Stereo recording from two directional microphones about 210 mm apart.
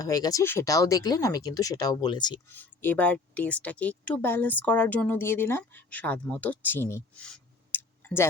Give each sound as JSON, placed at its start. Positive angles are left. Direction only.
{"t": 0.0, "sound": "speech", "side_deg": 15}
{"t": 2.5, "sound": "speech", "side_deg": 10}